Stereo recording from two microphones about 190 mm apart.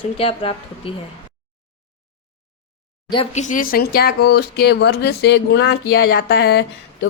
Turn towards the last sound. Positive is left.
turn(degrees=60)  # may be behind; listen again after turning